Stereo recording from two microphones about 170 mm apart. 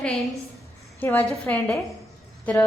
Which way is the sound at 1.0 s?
10° left (ahead or behind).